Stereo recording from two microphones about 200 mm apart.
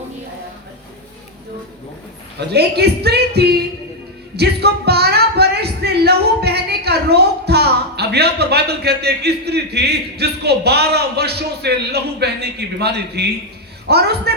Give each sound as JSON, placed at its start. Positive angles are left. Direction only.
{"t": 2.5, "sound": "speech", "side_deg": -55}